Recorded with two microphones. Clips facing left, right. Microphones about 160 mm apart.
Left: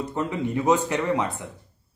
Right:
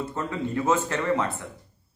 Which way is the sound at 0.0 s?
15° left (ahead or behind).